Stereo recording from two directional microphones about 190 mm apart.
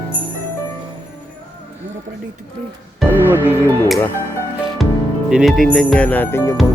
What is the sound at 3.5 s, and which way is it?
Speech, 10° left (ahead or behind).